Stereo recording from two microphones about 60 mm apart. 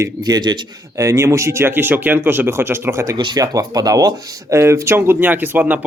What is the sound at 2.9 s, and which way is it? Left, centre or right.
Speech, right.